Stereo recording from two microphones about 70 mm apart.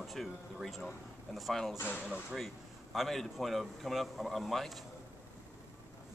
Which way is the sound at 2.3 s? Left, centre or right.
Centre.